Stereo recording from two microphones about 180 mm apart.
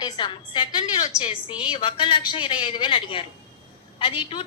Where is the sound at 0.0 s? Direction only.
25° left (ahead or behind).